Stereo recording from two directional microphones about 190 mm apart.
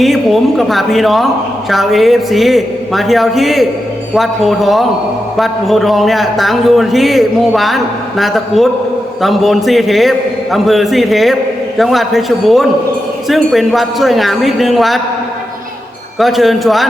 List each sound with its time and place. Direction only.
0.0 s a man's voice: centre (ahead or behind)
16.1 s a man's voice: centre (ahead or behind)